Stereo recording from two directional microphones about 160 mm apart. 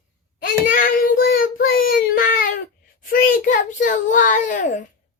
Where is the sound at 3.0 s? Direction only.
55° left (ahead or behind).